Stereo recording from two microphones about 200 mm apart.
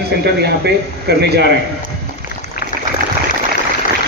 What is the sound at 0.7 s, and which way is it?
Speech, 55° right (ahead or behind).